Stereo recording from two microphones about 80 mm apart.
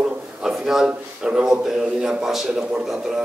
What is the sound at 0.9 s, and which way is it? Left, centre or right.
A man's voice, centre.